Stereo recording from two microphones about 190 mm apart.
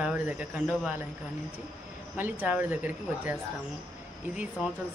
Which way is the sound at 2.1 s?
10° right (ahead or behind).